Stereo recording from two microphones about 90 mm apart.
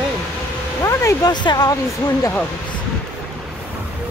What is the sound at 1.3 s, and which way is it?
Speech, 55° left (ahead or behind).